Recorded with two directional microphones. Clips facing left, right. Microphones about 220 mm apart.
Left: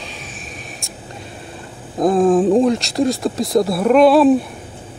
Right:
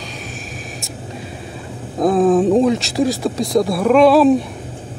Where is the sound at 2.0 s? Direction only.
Centre (ahead or behind).